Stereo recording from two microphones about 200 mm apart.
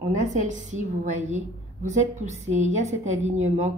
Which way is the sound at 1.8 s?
35° right (ahead or behind).